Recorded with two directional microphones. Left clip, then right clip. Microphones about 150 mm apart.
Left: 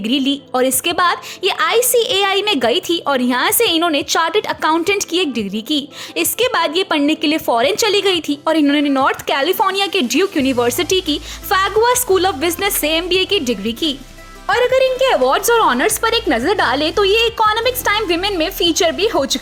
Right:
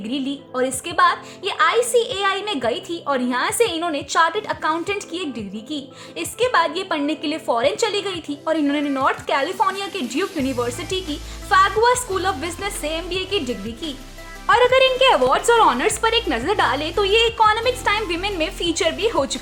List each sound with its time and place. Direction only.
0.0 s a woman's voice: 50° left (ahead or behind)
14.4 s a woman's voice: 10° left (ahead or behind)
15.4 s a woman's voice: 45° left (ahead or behind)